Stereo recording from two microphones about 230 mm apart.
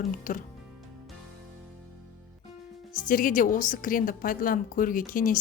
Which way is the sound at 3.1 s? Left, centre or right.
Left.